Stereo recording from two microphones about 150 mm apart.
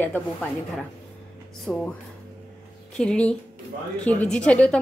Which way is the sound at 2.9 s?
5° left (ahead or behind).